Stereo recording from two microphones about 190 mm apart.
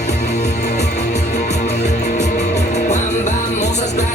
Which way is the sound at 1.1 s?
40° left (ahead or behind).